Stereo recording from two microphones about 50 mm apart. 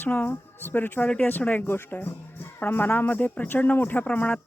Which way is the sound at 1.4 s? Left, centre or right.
Left.